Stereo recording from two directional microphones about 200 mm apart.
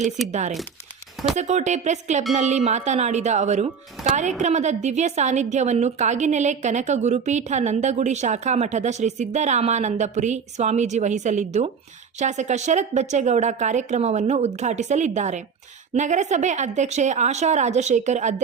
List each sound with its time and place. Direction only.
0.3 s a woman's voice: 35° right (ahead or behind)